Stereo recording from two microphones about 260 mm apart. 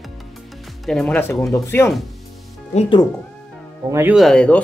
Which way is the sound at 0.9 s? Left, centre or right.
Centre.